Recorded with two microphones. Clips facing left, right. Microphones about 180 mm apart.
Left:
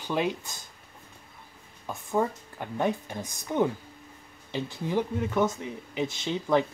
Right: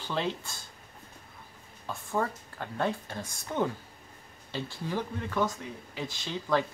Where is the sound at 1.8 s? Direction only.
15° left (ahead or behind).